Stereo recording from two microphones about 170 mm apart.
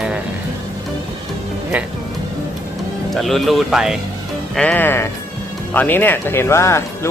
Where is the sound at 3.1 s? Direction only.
Centre (ahead or behind).